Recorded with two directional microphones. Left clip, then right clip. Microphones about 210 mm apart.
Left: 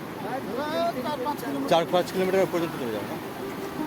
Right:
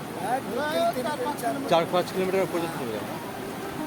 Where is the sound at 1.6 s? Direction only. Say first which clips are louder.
Left 1 dB; 15° left (ahead or behind).